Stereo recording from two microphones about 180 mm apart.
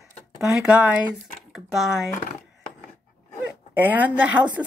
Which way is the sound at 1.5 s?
Centre (ahead or behind).